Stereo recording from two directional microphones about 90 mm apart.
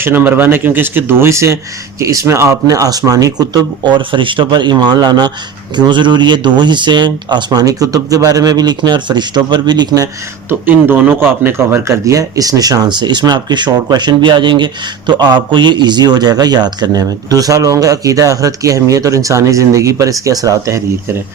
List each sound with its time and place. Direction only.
0.0 s speech: 20° right (ahead or behind); by 10.1 s 45° right (ahead or behind)
10.7 s speech: 20° right (ahead or behind); by 20.8 s 35° right (ahead or behind)